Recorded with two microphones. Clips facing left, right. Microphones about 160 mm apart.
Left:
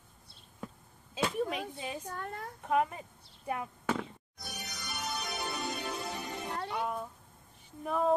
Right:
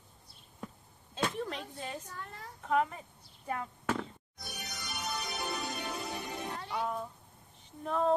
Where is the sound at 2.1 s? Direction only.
55° left (ahead or behind).